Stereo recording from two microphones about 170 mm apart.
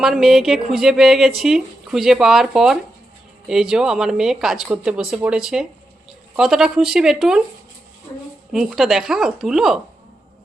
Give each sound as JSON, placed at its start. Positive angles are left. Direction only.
{"t": 0.0, "sound": "a woman's voice", "side_deg": 0}
{"t": 8.5, "sound": "a woman's voice", "side_deg": 0}